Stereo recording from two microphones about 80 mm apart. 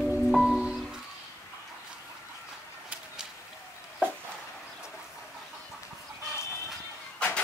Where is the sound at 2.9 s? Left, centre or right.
Centre.